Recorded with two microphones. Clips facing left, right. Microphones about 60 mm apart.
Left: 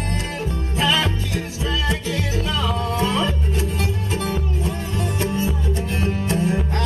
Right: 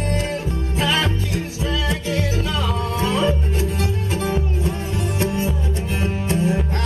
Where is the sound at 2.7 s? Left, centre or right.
Right.